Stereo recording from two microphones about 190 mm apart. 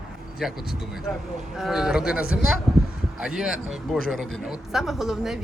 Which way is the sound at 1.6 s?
Centre (ahead or behind).